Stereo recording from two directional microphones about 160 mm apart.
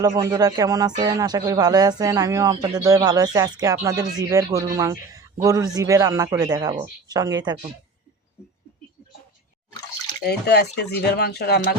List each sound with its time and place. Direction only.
0.0 s speech: 25° right (ahead or behind)
10.2 s speech: 90° left